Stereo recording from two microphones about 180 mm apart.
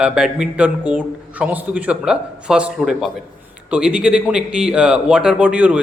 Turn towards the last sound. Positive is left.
turn(degrees=-5)  # may be behind; listen again after turning